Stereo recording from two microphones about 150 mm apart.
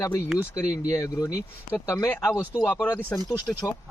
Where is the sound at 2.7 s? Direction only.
15° left (ahead or behind).